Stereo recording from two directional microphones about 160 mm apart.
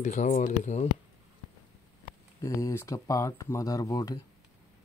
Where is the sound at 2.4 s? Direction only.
15° left (ahead or behind).